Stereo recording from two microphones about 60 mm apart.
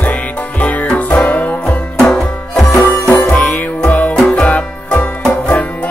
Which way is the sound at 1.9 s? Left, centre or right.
Centre.